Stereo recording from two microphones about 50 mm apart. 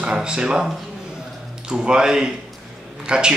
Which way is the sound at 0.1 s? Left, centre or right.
Centre.